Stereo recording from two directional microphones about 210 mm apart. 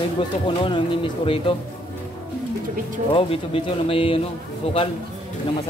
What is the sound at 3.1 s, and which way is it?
Speech, 25° left (ahead or behind).